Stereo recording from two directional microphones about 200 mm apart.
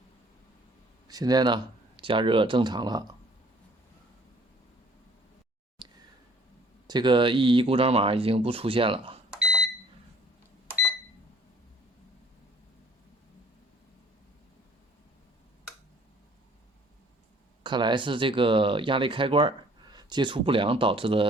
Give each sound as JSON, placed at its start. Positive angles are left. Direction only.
{"t": 1.0, "sound": "speech", "side_deg": -20}
{"t": 5.8, "sound": "a sound", "side_deg": -25}
{"t": 6.8, "sound": "speech", "side_deg": -20}
{"t": 9.3, "sound": "microwave oven", "side_deg": 0}
{"t": 17.6, "sound": "speech", "side_deg": -20}